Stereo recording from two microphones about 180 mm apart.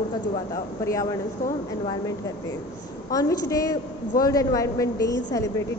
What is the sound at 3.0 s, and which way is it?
A woman's voice, 20° left (ahead or behind).